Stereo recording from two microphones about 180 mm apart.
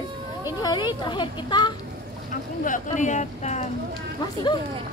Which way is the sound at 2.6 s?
45° left (ahead or behind).